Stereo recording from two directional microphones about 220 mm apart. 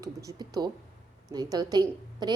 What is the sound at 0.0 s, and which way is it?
A woman's voice, 15° right (ahead or behind).